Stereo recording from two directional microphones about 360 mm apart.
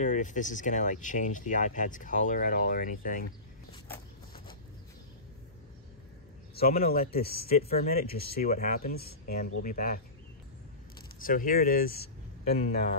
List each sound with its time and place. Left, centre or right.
0.0 s speech: left
6.5 s speech: left
11.2 s speech: left